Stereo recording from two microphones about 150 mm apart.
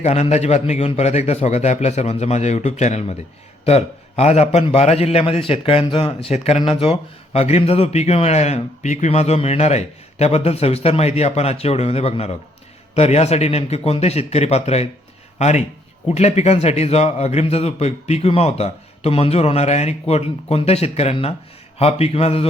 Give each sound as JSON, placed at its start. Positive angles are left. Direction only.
{"t": 0.0, "sound": "a man's voice", "side_deg": 50}